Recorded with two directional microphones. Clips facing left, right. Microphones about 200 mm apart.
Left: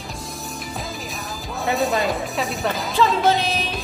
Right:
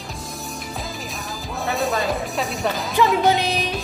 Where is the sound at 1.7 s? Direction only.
Centre (ahead or behind).